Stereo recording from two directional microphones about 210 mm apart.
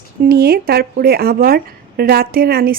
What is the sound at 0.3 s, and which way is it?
Speech, 50° right (ahead or behind).